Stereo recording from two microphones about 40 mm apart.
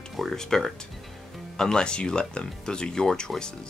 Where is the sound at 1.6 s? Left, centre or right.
Centre.